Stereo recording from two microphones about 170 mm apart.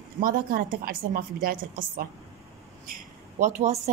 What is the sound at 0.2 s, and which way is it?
A woman's voice, 55° right (ahead or behind).